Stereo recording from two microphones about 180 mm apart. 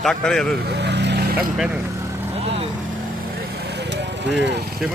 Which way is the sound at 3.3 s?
65° right (ahead or behind).